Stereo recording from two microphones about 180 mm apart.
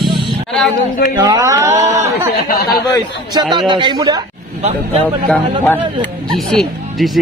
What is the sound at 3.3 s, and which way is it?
Speech, 25° right (ahead or behind).